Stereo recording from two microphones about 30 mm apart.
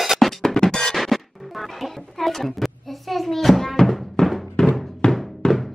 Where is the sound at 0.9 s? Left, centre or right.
Centre.